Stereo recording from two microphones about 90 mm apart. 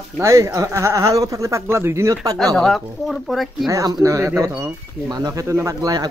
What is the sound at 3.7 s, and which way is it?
Speech, 35° right (ahead or behind).